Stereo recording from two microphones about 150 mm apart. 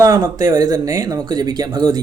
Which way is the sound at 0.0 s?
25° right (ahead or behind).